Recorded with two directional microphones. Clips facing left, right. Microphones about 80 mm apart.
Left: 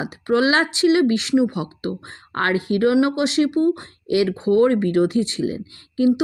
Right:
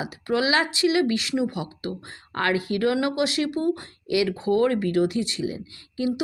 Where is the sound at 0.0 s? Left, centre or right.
Left.